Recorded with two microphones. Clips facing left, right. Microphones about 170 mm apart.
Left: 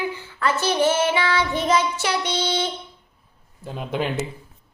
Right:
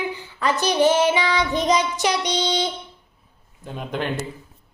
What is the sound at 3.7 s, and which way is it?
Speech, 5° left (ahead or behind).